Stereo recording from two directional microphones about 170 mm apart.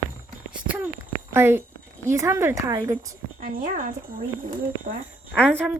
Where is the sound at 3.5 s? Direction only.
55° right (ahead or behind).